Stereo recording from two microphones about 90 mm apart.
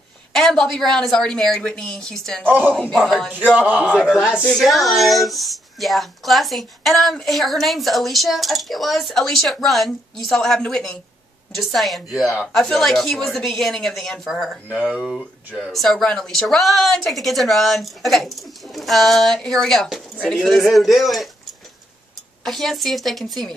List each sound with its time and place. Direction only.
0.3 s speech: 5° left (ahead or behind)
2.4 s a man's voice: 20° right (ahead or behind); by 23.5 s centre (ahead or behind)